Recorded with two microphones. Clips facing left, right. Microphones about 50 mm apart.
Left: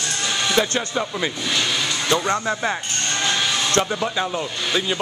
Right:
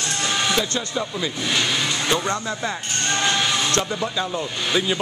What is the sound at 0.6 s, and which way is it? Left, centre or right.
Speech, left.